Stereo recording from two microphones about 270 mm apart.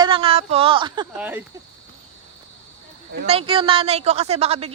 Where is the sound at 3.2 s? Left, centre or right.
Right.